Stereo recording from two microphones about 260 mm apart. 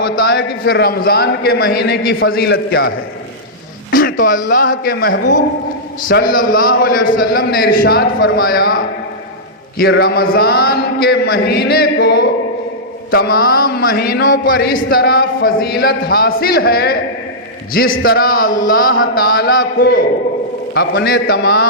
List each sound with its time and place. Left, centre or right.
0.0 s a man's voice: left
3.9 s a man's voice: left
6.3 s a man's voice: left
9.7 s a man's voice: left
18.0 s a man's voice: left